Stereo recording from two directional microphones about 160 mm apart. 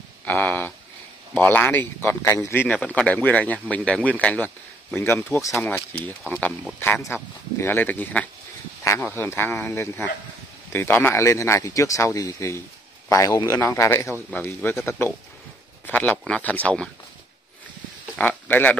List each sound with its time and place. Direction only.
0.2 s speech: 10° left (ahead or behind)
5.5 s a man's voice: 5° left (ahead or behind)
18.1 s a sound: 10° left (ahead or behind)